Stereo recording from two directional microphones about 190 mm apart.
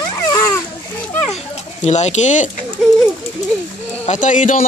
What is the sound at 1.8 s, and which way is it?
Speech, 35° left (ahead or behind).